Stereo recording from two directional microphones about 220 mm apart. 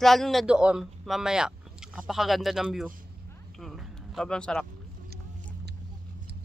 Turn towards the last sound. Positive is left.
turn(degrees=5)  # may be behind; listen again after turning